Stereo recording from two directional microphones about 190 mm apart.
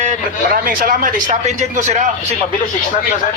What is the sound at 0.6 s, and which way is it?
A man's voice, 45° right (ahead or behind).